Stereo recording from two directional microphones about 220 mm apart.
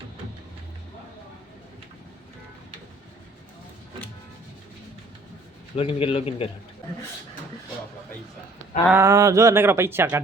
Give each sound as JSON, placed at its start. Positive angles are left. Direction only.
{"t": 5.7, "sound": "a man's voice", "side_deg": 25}
{"t": 8.9, "sound": "speech", "side_deg": -15}